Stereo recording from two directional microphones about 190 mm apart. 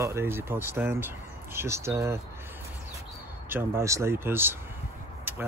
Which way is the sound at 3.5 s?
10° right (ahead or behind).